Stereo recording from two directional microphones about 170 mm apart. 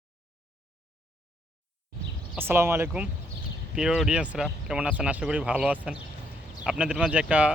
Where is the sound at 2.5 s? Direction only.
15° right (ahead or behind).